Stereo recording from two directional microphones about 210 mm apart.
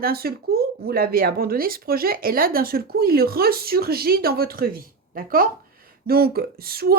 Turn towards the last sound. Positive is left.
turn(degrees=-45)  # may be behind; listen again after turning